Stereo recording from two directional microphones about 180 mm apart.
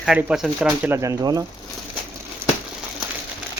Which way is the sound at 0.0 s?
5° right (ahead or behind).